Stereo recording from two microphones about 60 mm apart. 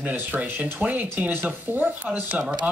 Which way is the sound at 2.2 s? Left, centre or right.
Centre.